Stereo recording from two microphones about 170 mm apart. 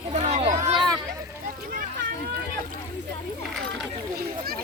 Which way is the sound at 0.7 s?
30° right (ahead or behind).